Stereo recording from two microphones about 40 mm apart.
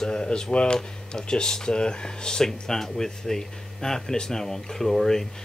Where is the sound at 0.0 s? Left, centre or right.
Centre.